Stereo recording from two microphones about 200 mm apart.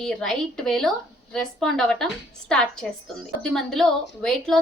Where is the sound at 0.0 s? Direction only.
5° left (ahead or behind).